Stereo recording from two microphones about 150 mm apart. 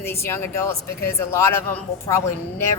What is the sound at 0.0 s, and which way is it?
A man's voice, 15° left (ahead or behind).